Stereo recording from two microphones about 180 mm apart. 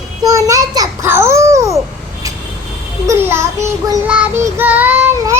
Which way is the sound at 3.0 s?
15° right (ahead or behind).